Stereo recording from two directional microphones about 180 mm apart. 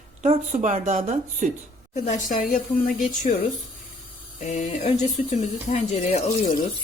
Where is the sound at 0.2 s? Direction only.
40° right (ahead or behind).